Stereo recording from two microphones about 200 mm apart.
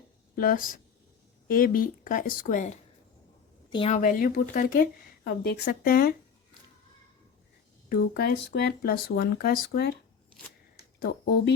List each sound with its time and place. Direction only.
0.3 s a woman's voice: 45° left (ahead or behind)
3.7 s speech: 25° left (ahead or behind)
3.9 s a woman's voice: 40° left (ahead or behind)
7.9 s a woman's voice: 50° left (ahead or behind)
11.0 s a woman's voice: 55° left (ahead or behind)